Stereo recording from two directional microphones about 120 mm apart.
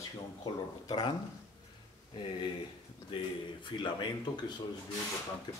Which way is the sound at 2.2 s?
40° left (ahead or behind).